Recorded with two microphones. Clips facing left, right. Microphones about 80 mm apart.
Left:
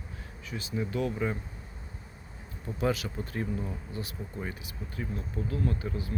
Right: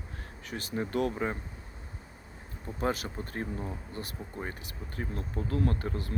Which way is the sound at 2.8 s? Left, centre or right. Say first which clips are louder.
Left 2 dB; right.